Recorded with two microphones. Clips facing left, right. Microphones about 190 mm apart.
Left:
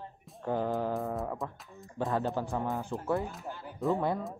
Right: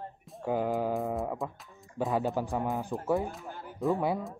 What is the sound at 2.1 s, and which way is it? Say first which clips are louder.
Speech: right 2 dB; 15° right (ahead or behind).